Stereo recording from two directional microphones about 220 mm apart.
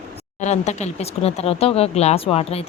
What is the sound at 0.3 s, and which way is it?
Speech, 30° left (ahead or behind).